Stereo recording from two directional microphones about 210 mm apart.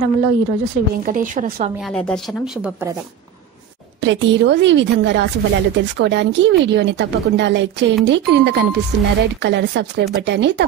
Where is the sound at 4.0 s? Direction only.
60° right (ahead or behind).